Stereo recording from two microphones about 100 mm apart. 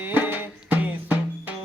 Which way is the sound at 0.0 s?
20° right (ahead or behind).